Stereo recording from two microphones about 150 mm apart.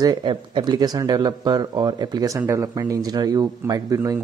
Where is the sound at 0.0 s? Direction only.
30° right (ahead or behind).